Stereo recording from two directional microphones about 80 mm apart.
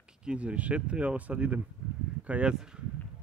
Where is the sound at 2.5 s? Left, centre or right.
Centre.